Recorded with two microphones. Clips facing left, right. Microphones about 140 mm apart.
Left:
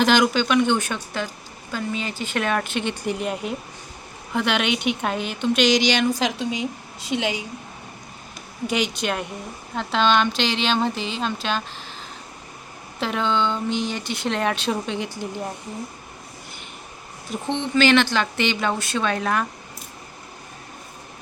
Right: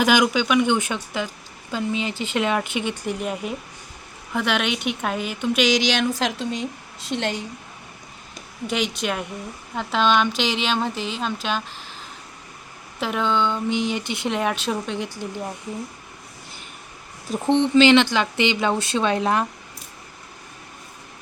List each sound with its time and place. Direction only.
0.0 s speech: 10° right (ahead or behind)
2.9 s a woman's voice: centre (ahead or behind)
8.6 s a woman's voice: centre (ahead or behind)
13.0 s speech: 5° right (ahead or behind)
14.3 s a woman's voice: 5° right (ahead or behind)
17.2 s speech: 35° right (ahead or behind)
17.7 s speech: 20° right (ahead or behind)